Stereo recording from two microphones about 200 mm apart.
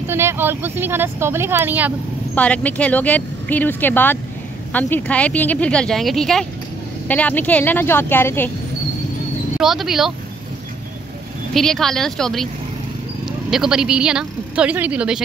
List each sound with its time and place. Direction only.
0.1 s speech: 10° right (ahead or behind)
2.3 s speech: 5° left (ahead or behind)
9.6 s a woman's voice: centre (ahead or behind)
11.5 s a woman's voice: centre (ahead or behind)
13.5 s a woman's voice: 5° right (ahead or behind)